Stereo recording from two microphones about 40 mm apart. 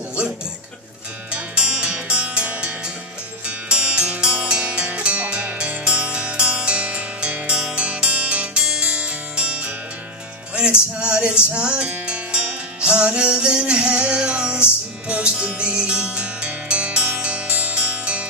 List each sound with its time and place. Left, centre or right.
1.3 s music: right
11.0 s music: right